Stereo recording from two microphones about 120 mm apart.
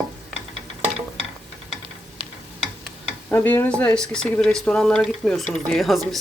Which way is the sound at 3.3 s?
15° left (ahead or behind).